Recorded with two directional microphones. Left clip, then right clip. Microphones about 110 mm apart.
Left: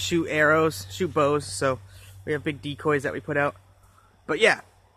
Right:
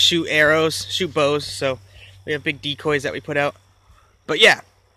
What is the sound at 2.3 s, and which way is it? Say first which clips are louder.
Speech: right 10 dB; 15° right (ahead or behind).